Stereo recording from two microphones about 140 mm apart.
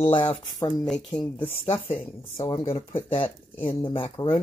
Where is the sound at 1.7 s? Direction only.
15° left (ahead or behind).